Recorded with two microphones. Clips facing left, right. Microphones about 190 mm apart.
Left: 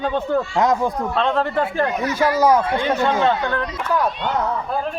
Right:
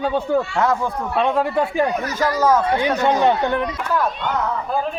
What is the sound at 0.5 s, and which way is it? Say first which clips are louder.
Speech: left 2 dB; 15° left (ahead or behind).